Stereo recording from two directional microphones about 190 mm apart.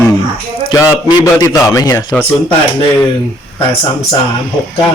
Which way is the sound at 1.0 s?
20° left (ahead or behind).